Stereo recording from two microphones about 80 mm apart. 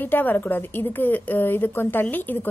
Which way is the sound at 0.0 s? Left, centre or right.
Left.